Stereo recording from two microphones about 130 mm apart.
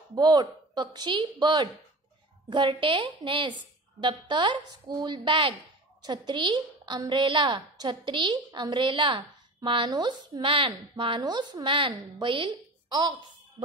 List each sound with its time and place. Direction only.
0.1 s a woman's voice: 35° right (ahead or behind)